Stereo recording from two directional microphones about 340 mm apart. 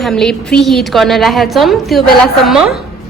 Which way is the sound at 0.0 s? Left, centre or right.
Centre.